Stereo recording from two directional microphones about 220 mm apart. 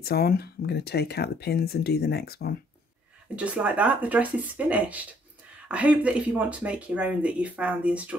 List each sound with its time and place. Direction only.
0.0 s speech: 45° left (ahead or behind)
3.3 s speech: 5° right (ahead or behind)